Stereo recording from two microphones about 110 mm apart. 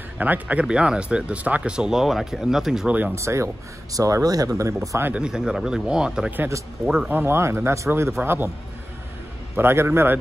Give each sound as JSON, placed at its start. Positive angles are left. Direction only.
{"t": 0.2, "sound": "speech", "side_deg": -15}
{"t": 3.0, "sound": "speech", "side_deg": -25}
{"t": 5.1, "sound": "speech", "side_deg": -5}
{"t": 7.1, "sound": "speech", "side_deg": -20}
{"t": 9.6, "sound": "speech", "side_deg": -20}